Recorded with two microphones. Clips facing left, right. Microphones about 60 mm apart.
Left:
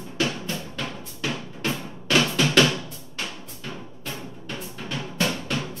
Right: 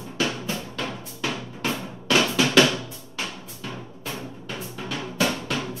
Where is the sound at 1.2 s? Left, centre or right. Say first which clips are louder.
Even; centre.